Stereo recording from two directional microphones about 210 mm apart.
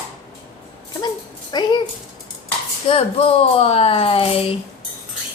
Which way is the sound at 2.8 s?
25° left (ahead or behind).